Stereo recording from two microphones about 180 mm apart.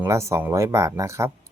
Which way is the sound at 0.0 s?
15° right (ahead or behind).